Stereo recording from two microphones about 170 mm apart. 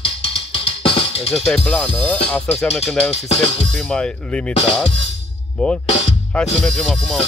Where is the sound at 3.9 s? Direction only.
5° left (ahead or behind).